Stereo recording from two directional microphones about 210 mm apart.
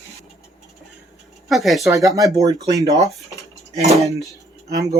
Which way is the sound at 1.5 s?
Centre (ahead or behind).